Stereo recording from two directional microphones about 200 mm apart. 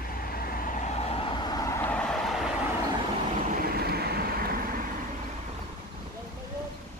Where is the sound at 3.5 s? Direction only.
50° right (ahead or behind).